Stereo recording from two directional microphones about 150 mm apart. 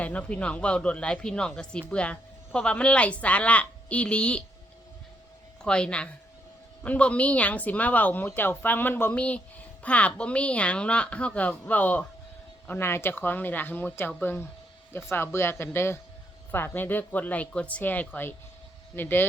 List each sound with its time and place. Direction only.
0.0 s speech: 10° left (ahead or behind)
5.6 s speech: 5° left (ahead or behind)